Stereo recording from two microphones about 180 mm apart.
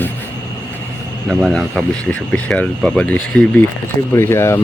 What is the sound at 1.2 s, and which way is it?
Speech, centre (ahead or behind).